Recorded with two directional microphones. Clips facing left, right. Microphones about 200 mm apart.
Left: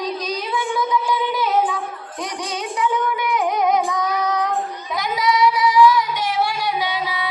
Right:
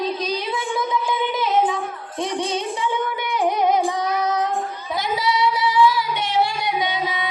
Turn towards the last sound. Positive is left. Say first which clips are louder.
# even
turn(degrees=-25)  # may be behind; listen again after turning